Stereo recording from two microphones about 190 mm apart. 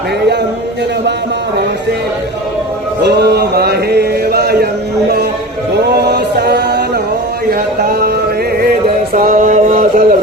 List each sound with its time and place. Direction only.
3.0 s chant: 60° right (ahead or behind)
5.7 s music: 60° right (ahead or behind)
7.8 s a sound: 50° right (ahead or behind)
9.1 s mantra: 45° right (ahead or behind)